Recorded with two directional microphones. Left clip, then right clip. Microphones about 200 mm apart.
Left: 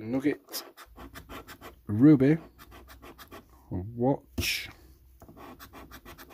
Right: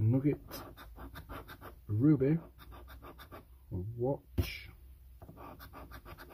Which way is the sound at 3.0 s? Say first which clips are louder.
Left 4 dB; centre (ahead or behind).